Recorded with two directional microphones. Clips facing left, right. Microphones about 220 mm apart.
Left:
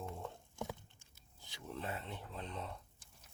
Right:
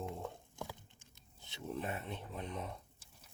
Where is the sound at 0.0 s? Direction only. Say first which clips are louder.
Right 3 dB; 15° right (ahead or behind).